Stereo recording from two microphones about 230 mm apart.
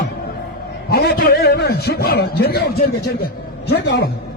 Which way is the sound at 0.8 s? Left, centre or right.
Left.